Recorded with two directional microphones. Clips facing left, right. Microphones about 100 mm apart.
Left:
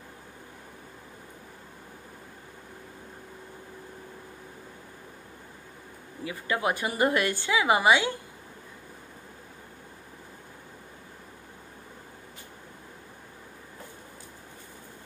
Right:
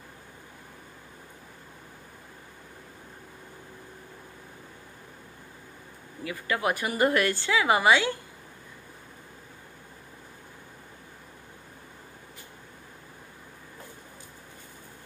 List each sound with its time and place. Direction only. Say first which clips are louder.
6.2 s a woman's voice: even; 25° left (ahead or behind)